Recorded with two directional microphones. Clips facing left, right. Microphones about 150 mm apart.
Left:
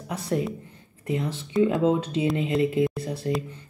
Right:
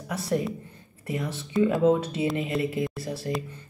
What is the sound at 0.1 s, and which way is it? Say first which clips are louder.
Speech: even; 20° left (ahead or behind).